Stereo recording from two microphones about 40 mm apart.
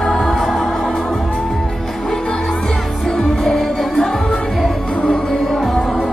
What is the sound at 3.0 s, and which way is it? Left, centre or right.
Music, centre.